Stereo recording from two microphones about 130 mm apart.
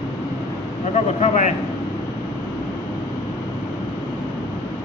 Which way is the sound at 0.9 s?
65° left (ahead or behind).